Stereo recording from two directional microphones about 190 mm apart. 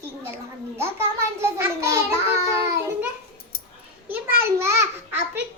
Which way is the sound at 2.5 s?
15° right (ahead or behind).